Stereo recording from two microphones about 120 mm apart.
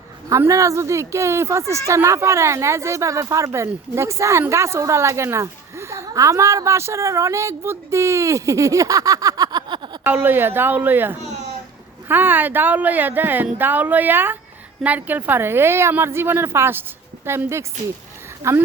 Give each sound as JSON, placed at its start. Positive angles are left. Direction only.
{"t": 0.3, "sound": "speech", "side_deg": -25}
{"t": 10.0, "sound": "speech", "side_deg": -15}